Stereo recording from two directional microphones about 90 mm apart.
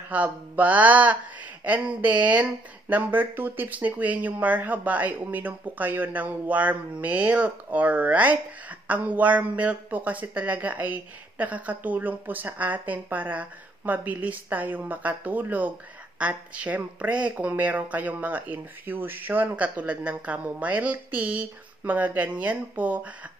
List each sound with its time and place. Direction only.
0.1 s speech: 15° right (ahead or behind)